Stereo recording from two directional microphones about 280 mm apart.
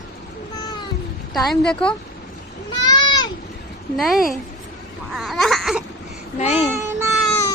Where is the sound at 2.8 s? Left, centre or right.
Centre.